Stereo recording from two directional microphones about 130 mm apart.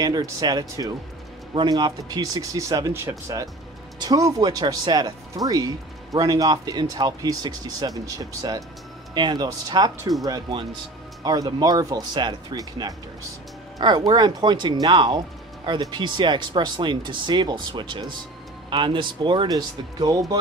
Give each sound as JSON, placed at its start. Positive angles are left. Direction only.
{"t": 0.0, "sound": "speech", "side_deg": -30}